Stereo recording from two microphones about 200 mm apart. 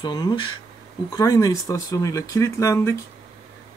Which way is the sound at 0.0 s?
20° left (ahead or behind).